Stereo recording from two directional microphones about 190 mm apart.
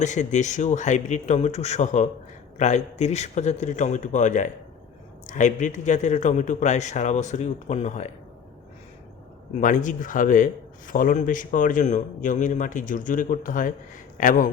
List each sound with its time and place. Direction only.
0.0 s a man's voice: 40° left (ahead or behind)
9.6 s a man's voice: 45° left (ahead or behind)